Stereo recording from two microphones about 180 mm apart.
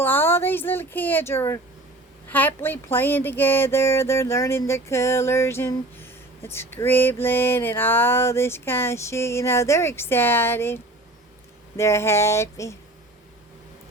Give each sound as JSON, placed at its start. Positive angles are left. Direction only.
{"t": 0.0, "sound": "speech", "side_deg": 10}
{"t": 2.6, "sound": "speech", "side_deg": 10}